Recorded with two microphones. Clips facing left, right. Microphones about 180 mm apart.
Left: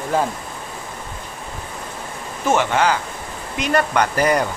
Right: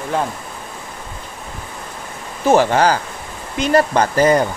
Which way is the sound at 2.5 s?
35° right (ahead or behind).